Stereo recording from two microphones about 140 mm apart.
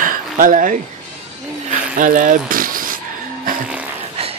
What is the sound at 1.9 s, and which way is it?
Speech, 70° right (ahead or behind).